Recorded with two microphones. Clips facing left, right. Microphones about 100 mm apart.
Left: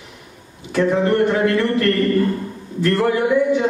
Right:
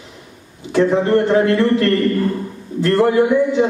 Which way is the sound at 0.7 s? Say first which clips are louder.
Right 3 dB; 25° right (ahead or behind).